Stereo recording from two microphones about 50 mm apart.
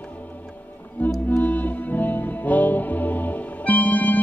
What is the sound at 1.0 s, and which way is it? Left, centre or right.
Music, left.